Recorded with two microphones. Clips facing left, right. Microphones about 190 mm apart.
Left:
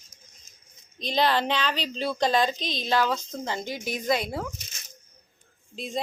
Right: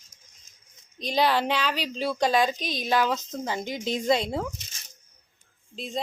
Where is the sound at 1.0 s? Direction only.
10° right (ahead or behind).